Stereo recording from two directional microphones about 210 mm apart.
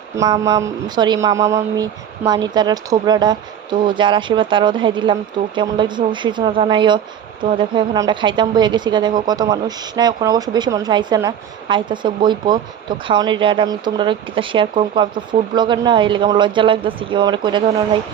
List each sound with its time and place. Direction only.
0.2 s a woman's voice: 20° right (ahead or behind)